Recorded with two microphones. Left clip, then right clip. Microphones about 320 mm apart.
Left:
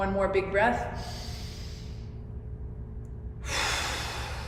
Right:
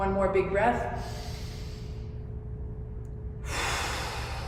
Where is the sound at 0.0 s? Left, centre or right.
Left.